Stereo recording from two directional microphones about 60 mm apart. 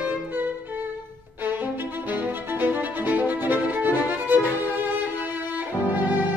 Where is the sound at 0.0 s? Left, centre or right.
Right.